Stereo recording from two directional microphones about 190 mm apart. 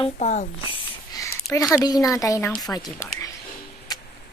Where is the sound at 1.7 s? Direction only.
20° left (ahead or behind).